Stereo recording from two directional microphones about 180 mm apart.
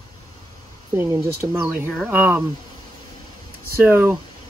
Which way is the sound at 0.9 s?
15° right (ahead or behind).